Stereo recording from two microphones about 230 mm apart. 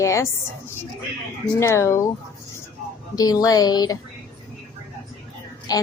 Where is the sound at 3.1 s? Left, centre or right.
Centre.